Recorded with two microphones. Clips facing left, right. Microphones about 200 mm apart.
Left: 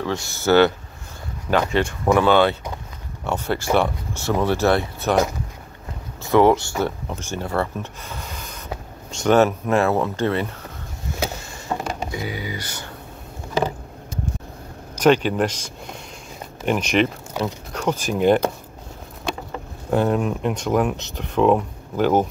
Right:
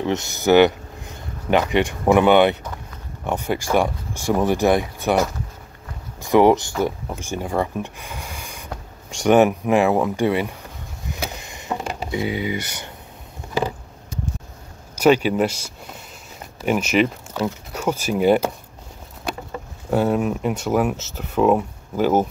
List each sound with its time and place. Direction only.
0.0 s speech: 20° right (ahead or behind)
6.2 s speech: 15° right (ahead or behind)
11.2 s a sound: 15° right (ahead or behind)
15.0 s speech: 10° right (ahead or behind)
19.9 s speech: 5° right (ahead or behind)